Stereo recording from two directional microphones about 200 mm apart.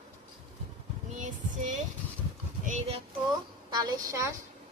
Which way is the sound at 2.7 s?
30° right (ahead or behind).